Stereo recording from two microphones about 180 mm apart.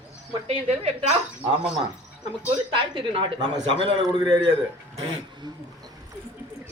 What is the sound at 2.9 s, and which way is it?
A man's voice, 30° right (ahead or behind).